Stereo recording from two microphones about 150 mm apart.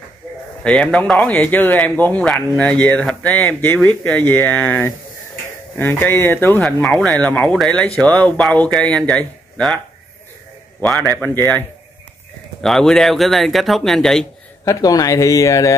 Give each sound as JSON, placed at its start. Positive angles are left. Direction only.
{"t": 0.7, "sound": "speech", "side_deg": 5}
{"t": 10.8, "sound": "speech", "side_deg": 5}
{"t": 12.6, "sound": "speech", "side_deg": 0}
{"t": 14.6, "sound": "speech", "side_deg": 25}